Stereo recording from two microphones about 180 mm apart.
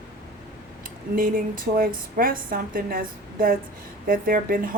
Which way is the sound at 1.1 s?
50° right (ahead or behind).